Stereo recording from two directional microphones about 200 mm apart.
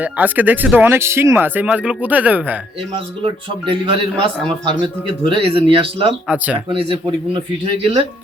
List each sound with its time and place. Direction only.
0.0 s speech: 10° right (ahead or behind)
3.2 s a man's voice: 25° right (ahead or behind)
6.2 s speech: 5° right (ahead or behind)
6.7 s a man's voice: 25° right (ahead or behind)